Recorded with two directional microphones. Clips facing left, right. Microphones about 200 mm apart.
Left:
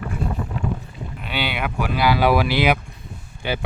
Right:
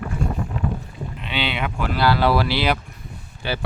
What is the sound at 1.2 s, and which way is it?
Speech, 5° left (ahead or behind).